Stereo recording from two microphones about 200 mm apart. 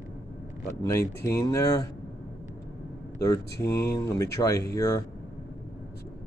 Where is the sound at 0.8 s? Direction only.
15° left (ahead or behind).